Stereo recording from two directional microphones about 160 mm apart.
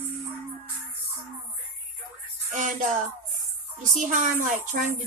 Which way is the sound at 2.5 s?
55° right (ahead or behind).